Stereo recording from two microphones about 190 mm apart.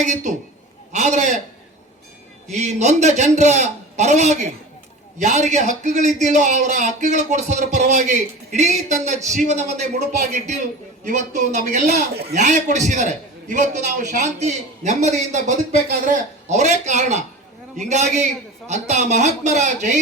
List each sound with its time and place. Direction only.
0.0 s a man's voice: 40° right (ahead or behind)
2.5 s a man's voice: 35° right (ahead or behind)